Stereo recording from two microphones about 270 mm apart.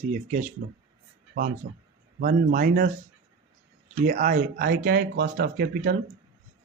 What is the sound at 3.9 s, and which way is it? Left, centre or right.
Speech, right.